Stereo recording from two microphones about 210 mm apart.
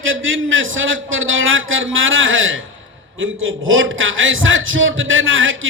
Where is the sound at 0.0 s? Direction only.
65° right (ahead or behind).